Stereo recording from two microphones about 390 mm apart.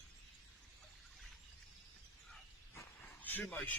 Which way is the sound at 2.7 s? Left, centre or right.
Centre.